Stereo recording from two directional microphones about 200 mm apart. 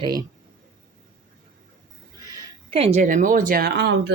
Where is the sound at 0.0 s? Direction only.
20° right (ahead or behind).